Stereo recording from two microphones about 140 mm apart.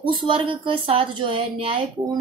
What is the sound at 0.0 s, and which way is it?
Speech, 40° right (ahead or behind).